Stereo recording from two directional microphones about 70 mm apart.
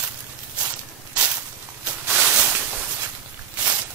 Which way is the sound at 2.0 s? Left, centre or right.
Right.